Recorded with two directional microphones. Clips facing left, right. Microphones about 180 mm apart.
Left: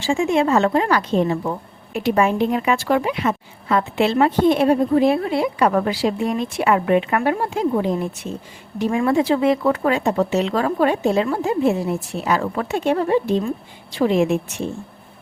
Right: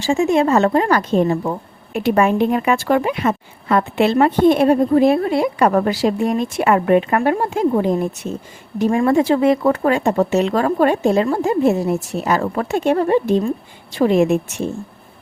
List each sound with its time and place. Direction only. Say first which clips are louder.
0.0 s speech: right 3 dB; 40° right (ahead or behind)